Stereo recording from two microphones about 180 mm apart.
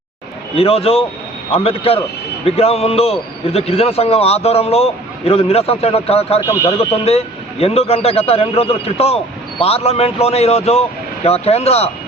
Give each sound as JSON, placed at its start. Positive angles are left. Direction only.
{"t": 0.5, "sound": "a man's voice", "side_deg": 35}
{"t": 6.4, "sound": "speech", "side_deg": 15}
{"t": 6.7, "sound": "a man's voice", "side_deg": 35}